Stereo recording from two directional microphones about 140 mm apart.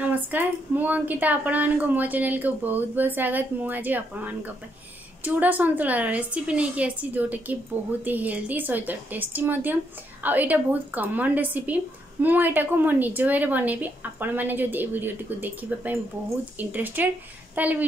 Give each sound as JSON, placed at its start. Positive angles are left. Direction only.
{"t": 0.0, "sound": "a woman's voice", "side_deg": -15}